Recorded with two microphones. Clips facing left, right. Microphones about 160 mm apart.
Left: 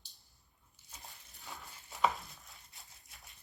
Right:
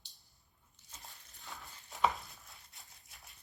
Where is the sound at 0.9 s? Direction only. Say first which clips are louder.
Left 1 dB; 10° left (ahead or behind).